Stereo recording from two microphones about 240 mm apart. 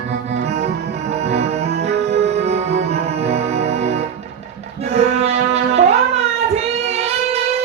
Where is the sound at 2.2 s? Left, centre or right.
Right.